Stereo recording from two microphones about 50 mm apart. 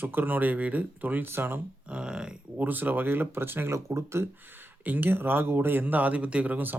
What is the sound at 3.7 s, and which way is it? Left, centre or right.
Speech, right.